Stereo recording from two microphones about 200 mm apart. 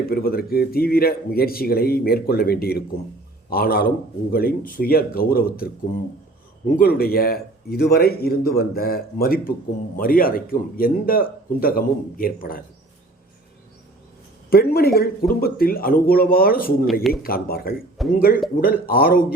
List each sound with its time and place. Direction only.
0.1 s a man's voice: 50° left (ahead or behind)
6.7 s a man's voice: 45° left (ahead or behind)
14.5 s a man's voice: 50° left (ahead or behind)
16.8 s speech: centre (ahead or behind)
17.1 s a man's voice: 50° left (ahead or behind)